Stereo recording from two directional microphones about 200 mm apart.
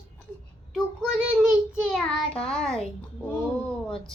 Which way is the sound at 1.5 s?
Centre (ahead or behind).